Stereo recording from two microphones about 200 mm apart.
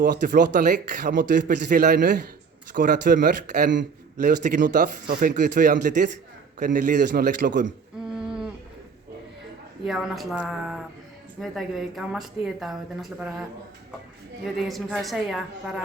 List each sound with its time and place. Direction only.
0.0 s a man's voice: 50° right (ahead or behind)
7.1 s a man's voice: 55° right (ahead or behind)
8.1 s humming: 5° right (ahead or behind)
9.8 s speech: centre (ahead or behind)
14.4 s speech: centre (ahead or behind)